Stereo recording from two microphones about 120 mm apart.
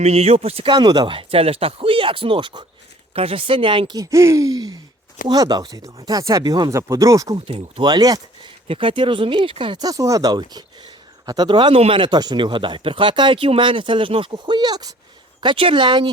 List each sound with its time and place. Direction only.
0.0 s speech: 65° right (ahead or behind)
0.7 s speech: 40° right (ahead or behind)
3.2 s speech: 50° right (ahead or behind)
3.9 s speech: 25° right (ahead or behind)
7.3 s speech: 50° right (ahead or behind)
7.9 s speech: 35° right (ahead or behind)
8.6 s speech: 45° right (ahead or behind)
9.8 s speech: 30° right (ahead or behind)
15.4 s speech: 45° right (ahead or behind)